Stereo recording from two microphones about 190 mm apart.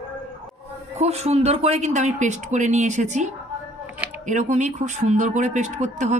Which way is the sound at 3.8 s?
10° right (ahead or behind).